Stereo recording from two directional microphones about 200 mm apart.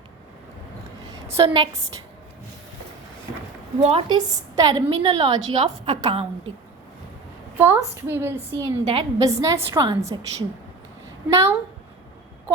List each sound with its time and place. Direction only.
1.4 s a woman's voice: 25° right (ahead or behind)
3.8 s a woman's voice: 30° right (ahead or behind)
4.3 s a woman's voice: 20° right (ahead or behind)
7.6 s a woman's voice: 10° right (ahead or behind)
8.6 s a woman's voice: 25° right (ahead or behind)